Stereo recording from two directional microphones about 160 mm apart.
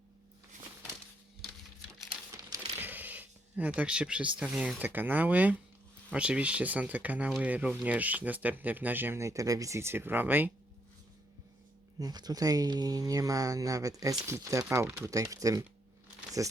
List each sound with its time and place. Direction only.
2.7 s speech: 10° right (ahead or behind)
11.9 s speech: 25° right (ahead or behind)